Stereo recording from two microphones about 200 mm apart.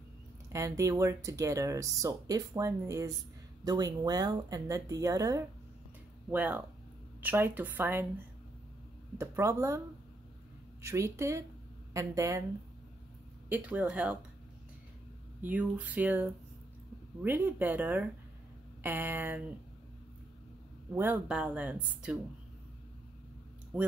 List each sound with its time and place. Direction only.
0.5 s speech: 15° right (ahead or behind)
9.2 s speech: 15° right (ahead or behind)
10.8 s speech: 15° right (ahead or behind)
13.5 s speech: 10° right (ahead or behind)
15.4 s speech: 5° right (ahead or behind)
20.9 s speech: 10° right (ahead or behind)
23.7 s speech: 5° right (ahead or behind)